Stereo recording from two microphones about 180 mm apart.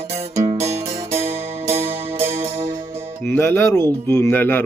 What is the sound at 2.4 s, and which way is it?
Music, 35° right (ahead or behind).